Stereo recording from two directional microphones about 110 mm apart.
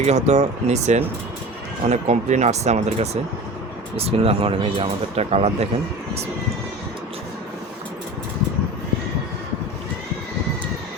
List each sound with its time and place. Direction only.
0.0 s speech: 90° right
3.9 s speech: 60° right (ahead or behind)